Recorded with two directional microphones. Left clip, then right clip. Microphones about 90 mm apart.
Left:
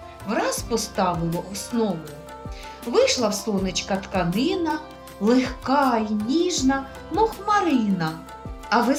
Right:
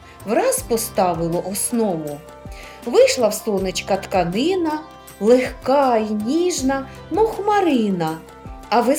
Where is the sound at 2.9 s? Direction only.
35° right (ahead or behind).